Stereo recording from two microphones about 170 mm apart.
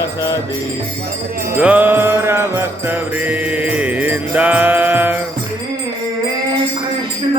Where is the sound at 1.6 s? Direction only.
10° right (ahead or behind).